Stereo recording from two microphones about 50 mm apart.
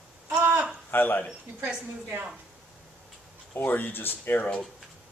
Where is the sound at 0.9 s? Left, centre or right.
Left.